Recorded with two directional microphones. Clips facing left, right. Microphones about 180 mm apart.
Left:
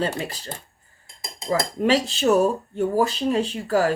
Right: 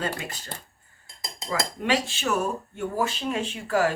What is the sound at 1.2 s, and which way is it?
Dishes, 35° left (ahead or behind).